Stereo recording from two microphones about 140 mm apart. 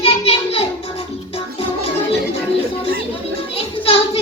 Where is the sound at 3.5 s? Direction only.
45° left (ahead or behind).